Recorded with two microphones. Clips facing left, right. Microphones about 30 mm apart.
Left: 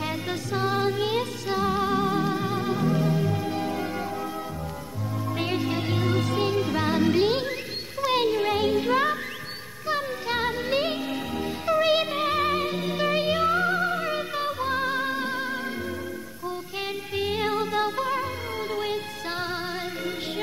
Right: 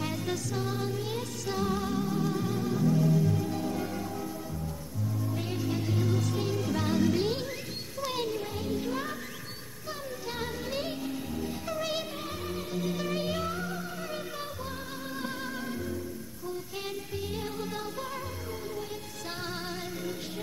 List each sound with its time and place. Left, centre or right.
0.0 s music: left
1.5 s music: left
1.9 s music: left
5.4 s music: left
8.4 s music: left
12.8 s music: left
14.7 s music: left
17.1 s music: left